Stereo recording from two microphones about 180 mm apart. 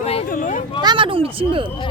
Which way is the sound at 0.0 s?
35° left (ahead or behind).